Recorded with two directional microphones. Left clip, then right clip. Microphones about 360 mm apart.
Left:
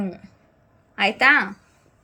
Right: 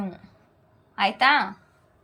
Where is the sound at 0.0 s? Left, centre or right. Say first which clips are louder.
Left 4 dB; centre.